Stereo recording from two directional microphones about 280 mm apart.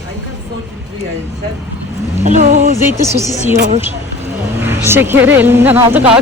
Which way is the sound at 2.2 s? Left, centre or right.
Right.